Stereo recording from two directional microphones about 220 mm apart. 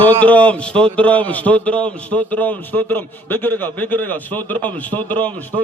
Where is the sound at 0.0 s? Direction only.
5° left (ahead or behind).